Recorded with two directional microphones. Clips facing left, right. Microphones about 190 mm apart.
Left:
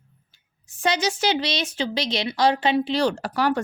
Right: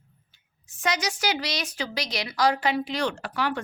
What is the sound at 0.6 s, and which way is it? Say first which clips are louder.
A woman's voice: left 5 dB; 30° left (ahead or behind).